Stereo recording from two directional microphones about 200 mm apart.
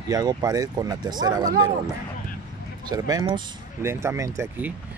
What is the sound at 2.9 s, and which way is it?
Speech, 20° right (ahead or behind).